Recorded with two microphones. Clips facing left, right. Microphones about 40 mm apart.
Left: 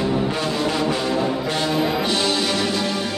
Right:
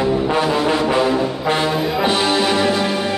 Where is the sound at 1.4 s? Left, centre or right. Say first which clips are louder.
Right 5 dB; right.